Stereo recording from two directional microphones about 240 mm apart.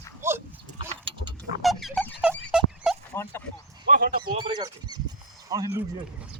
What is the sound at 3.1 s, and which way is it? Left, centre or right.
Speech, centre.